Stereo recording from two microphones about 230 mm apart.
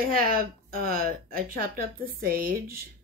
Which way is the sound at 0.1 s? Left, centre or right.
Right.